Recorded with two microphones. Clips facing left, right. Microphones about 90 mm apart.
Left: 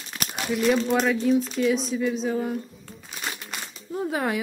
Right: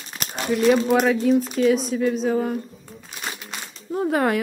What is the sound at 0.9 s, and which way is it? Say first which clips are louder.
Speech: right 3 dB; 5° right (ahead or behind).